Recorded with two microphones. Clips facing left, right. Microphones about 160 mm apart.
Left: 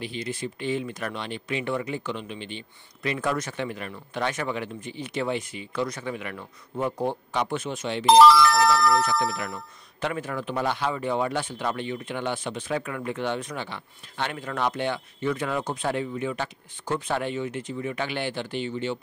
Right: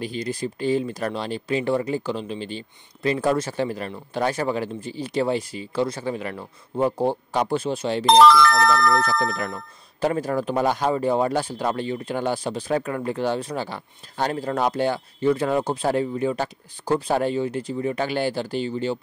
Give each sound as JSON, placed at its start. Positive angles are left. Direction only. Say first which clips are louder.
{"t": 0.0, "sound": "speech", "louder": "right 4 dB", "side_deg": -40}
{"t": 8.0, "sound": "speech", "louder": "even", "side_deg": 5}
{"t": 9.4, "sound": "speech", "louder": "right 4 dB", "side_deg": -40}